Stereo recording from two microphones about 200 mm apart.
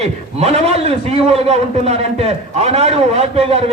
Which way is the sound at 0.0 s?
30° right (ahead or behind).